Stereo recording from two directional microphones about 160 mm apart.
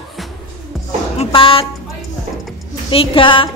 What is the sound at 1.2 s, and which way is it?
Speech, 35° left (ahead or behind).